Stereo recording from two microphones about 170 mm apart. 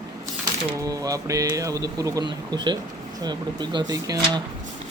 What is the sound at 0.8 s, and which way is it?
Speech, 20° right (ahead or behind).